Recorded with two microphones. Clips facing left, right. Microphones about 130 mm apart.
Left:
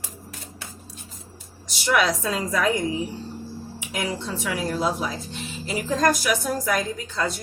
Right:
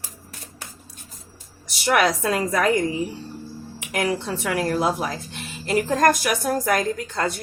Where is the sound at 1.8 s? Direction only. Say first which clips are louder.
Right 2 dB; 60° right (ahead or behind).